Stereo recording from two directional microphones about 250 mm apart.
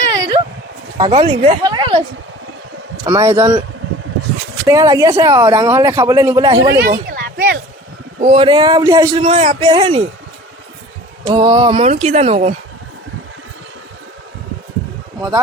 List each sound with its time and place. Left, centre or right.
0.1 s a sound: centre
0.9 s speech: centre
3.1 s speech: centre
4.6 s speech: centre
6.7 s a sound: right
8.2 s a man's voice: right
11.3 s a man's voice: centre